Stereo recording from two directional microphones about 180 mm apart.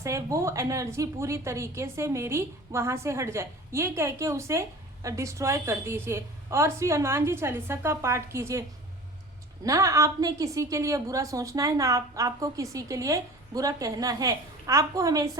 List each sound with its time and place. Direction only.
0.0 s a woman's voice: 15° right (ahead or behind)
9.6 s a woman's voice: 15° right (ahead or behind)